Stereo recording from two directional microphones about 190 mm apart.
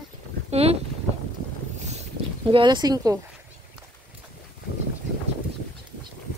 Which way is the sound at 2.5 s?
25° right (ahead or behind).